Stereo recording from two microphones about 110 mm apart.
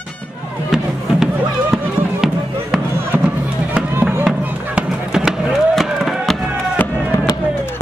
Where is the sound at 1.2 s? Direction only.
5° right (ahead or behind).